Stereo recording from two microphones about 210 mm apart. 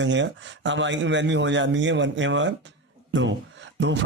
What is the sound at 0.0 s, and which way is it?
A man's voice, 60° right (ahead or behind).